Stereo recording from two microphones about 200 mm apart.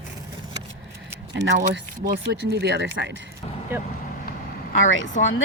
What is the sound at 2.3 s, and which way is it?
Speech, 55° right (ahead or behind).